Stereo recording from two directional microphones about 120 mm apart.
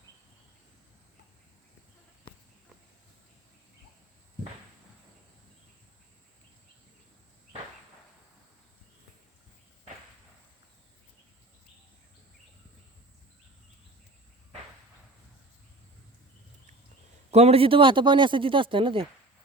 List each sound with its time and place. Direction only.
17.3 s speech: 60° right (ahead or behind)